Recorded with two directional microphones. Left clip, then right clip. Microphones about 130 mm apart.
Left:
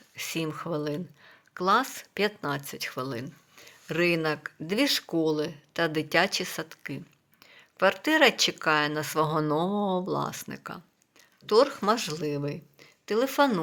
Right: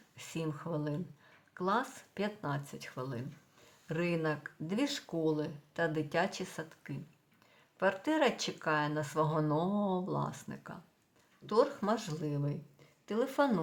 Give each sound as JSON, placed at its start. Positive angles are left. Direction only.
{"t": 0.2, "sound": "speech", "side_deg": 25}